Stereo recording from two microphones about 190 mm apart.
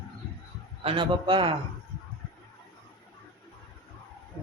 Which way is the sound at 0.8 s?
25° right (ahead or behind).